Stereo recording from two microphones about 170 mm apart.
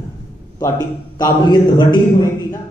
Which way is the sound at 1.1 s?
25° left (ahead or behind).